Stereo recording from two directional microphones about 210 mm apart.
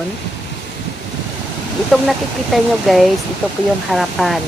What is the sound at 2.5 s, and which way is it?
Speech, centre (ahead or behind).